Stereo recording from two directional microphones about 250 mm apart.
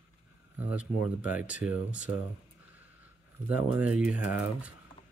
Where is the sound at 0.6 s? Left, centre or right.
Centre.